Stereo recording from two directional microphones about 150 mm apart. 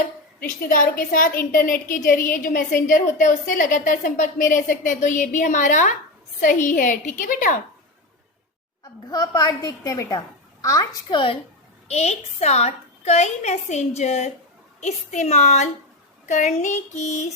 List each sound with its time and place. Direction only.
0.3 s a woman's voice: 70° left (ahead or behind)
8.8 s a woman's voice: 25° left (ahead or behind)
11.9 s a woman's voice: 45° left (ahead or behind)